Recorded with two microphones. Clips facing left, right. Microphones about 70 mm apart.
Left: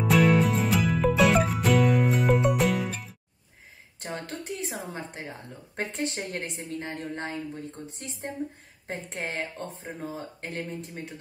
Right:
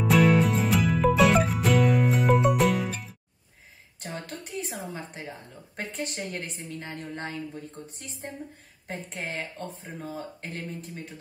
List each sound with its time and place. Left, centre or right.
0.0 s music: centre
4.3 s a sound: left
5.8 s a woman's voice: left
8.8 s a woman's voice: left
9.8 s speech: left
10.4 s a woman's voice: left